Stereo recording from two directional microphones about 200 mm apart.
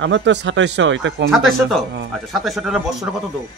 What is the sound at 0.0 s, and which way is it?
Speech, 65° right (ahead or behind).